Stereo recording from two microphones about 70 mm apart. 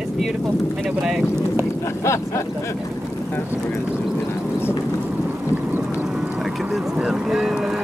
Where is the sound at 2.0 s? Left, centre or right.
Left.